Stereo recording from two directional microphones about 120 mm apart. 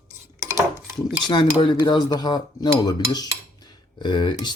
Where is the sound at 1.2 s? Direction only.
35° left (ahead or behind).